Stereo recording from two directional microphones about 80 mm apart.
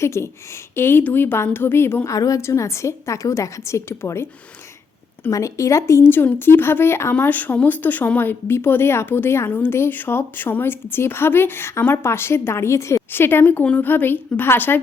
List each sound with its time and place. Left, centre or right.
0.0 s speech: left
2.0 s a woman's voice: left
5.3 s speech: left